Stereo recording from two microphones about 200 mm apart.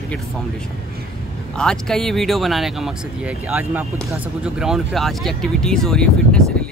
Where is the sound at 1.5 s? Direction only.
5° left (ahead or behind).